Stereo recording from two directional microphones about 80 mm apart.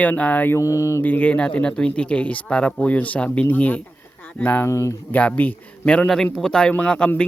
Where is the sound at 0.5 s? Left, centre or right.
Left.